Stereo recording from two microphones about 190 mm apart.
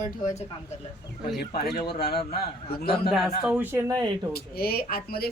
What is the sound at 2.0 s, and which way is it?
A man's voice, 55° left (ahead or behind).